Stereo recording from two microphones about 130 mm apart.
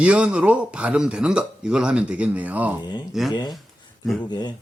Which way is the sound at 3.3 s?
35° left (ahead or behind).